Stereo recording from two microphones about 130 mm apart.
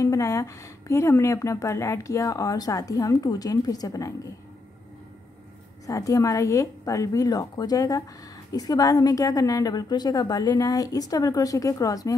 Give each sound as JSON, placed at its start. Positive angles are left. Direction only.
{"t": 0.0, "sound": "a woman's voice", "side_deg": 25}
{"t": 5.9, "sound": "a woman's voice", "side_deg": 25}